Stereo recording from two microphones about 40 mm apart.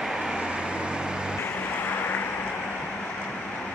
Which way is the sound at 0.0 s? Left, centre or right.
Centre.